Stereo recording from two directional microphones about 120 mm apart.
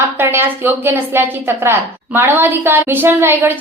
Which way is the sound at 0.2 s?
20° right (ahead or behind).